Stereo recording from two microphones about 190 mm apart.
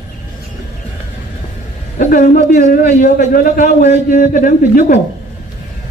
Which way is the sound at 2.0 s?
45° left (ahead or behind).